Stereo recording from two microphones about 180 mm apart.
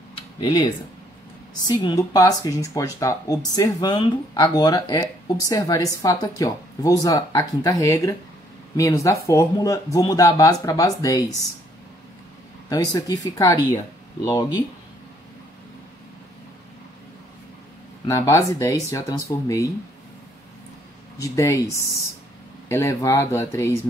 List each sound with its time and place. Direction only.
0.1 s tick-tock: 25° left (ahead or behind)
1.7 s speech: 25° left (ahead or behind)
12.6 s speech: 20° left (ahead or behind)
18.0 s speech: 15° left (ahead or behind)
21.2 s speech: 15° left (ahead or behind)